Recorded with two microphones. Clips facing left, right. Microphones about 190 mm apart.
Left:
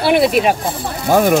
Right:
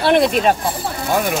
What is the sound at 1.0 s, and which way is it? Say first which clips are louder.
Speech: left 7 dB; 45° left (ahead or behind).